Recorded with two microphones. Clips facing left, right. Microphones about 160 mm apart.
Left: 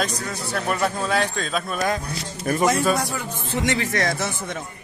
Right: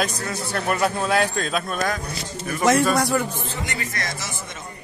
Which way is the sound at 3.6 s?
85° left.